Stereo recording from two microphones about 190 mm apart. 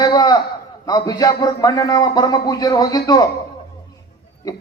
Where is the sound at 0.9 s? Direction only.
20° left (ahead or behind).